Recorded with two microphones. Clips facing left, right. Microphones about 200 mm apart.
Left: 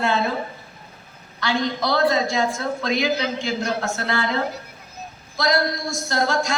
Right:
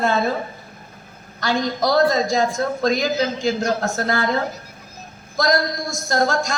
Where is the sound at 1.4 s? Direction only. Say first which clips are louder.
Right 2 dB; 45° right (ahead or behind).